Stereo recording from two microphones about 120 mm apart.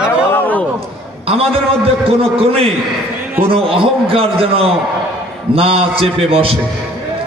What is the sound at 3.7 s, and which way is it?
A man's voice, 50° right (ahead or behind).